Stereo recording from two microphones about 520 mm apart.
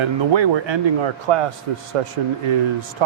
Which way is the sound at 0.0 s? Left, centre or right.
Right.